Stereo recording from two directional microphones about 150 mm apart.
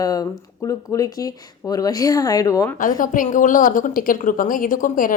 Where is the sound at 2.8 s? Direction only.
60° left (ahead or behind).